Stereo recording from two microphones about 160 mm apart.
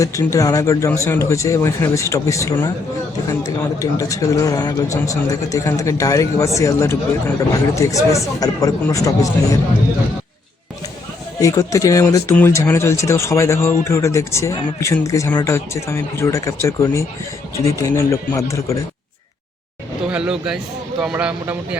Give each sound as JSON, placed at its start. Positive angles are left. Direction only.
{"t": 0.0, "sound": "a man's voice", "side_deg": 20}
{"t": 3.8, "sound": "a man's voice", "side_deg": 20}
{"t": 11.3, "sound": "a man's voice", "side_deg": 20}
{"t": 20.1, "sound": "speech", "side_deg": -5}